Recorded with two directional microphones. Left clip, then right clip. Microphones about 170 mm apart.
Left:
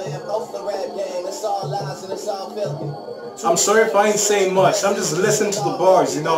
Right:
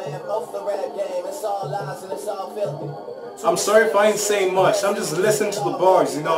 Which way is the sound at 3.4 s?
5° left (ahead or behind).